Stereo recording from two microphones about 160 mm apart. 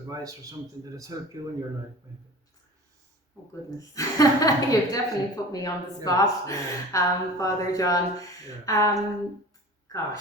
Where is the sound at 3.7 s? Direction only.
20° left (ahead or behind).